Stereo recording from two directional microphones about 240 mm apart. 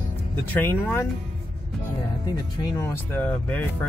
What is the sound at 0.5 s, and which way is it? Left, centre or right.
Speech, centre.